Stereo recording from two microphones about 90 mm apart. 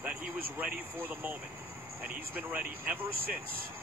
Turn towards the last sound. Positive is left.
turn(degrees=-20)  # may be behind; listen again after turning